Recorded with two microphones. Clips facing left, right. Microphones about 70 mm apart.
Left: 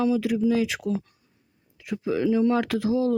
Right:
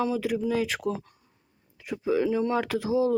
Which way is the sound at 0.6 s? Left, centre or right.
Right.